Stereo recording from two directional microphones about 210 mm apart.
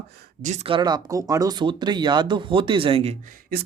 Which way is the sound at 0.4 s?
30° right (ahead or behind).